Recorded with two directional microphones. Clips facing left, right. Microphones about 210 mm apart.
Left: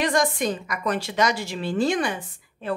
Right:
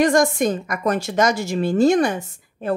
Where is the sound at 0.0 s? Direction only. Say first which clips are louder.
Right 6 dB; 45° right (ahead or behind).